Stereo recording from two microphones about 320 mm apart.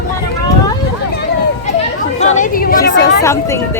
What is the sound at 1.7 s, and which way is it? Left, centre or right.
Chatter, left.